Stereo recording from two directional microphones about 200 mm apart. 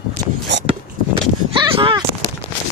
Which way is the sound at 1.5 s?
25° right (ahead or behind).